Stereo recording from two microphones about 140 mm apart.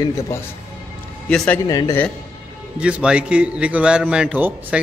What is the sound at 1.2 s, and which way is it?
Speech, 10° left (ahead or behind).